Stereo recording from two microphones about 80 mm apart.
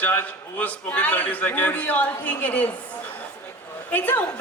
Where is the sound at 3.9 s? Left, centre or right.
Left.